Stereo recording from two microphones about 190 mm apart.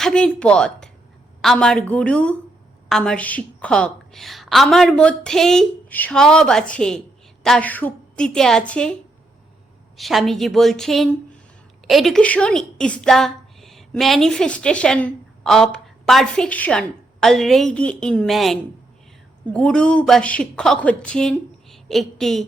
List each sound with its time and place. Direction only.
0.0 s a woman's voice: 5° left (ahead or behind)
10.0 s a woman's voice: centre (ahead or behind)